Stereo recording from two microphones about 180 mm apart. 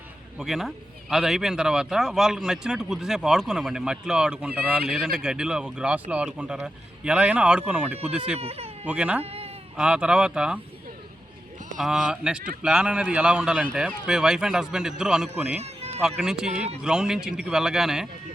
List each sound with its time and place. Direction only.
0.3 s a man's voice: centre (ahead or behind)
8.4 s speech: 35° right (ahead or behind)
8.9 s speech: 5° right (ahead or behind)
9.2 s a sound: 35° right (ahead or behind)
9.7 s a man's voice: 5° right (ahead or behind)
11.8 s a man's voice: 5° right (ahead or behind)